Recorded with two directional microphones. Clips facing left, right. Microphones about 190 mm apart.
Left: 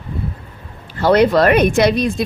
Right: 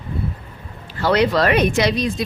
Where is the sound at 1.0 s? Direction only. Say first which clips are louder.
Left 5 dB; 45° left (ahead or behind).